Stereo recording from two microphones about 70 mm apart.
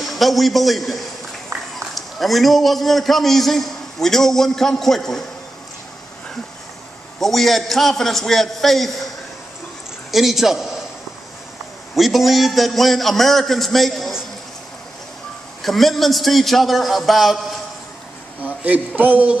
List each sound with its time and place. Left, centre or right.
0.0 s a man's voice: centre
1.5 s run: right
2.0 s a man's voice: centre
7.2 s a man's voice: centre
10.1 s a man's voice: centre
11.9 s a man's voice: centre
15.6 s a man's voice: centre
18.4 s a man's voice: right